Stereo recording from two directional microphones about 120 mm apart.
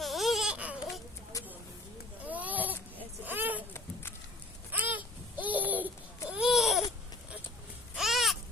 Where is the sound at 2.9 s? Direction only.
15° right (ahead or behind).